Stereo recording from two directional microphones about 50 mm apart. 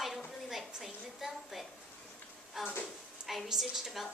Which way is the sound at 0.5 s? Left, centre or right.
Centre.